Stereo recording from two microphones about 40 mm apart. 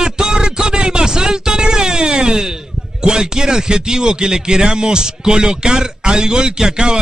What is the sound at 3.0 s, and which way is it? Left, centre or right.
Speech, centre.